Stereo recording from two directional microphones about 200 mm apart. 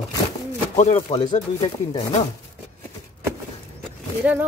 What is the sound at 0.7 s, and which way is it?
Speech, 35° left (ahead or behind).